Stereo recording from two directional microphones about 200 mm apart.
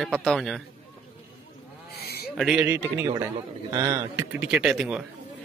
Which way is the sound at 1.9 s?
50° left (ahead or behind).